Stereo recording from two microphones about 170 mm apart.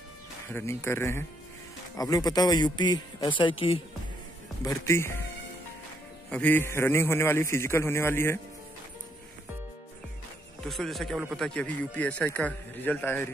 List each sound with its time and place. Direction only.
0.5 s a man's voice: 15° left (ahead or behind); by 3.8 s 30° left (ahead or behind)
4.6 s a man's voice: 15° left (ahead or behind)
6.3 s a man's voice: 10° left (ahead or behind)
10.6 s a man's voice: centre (ahead or behind)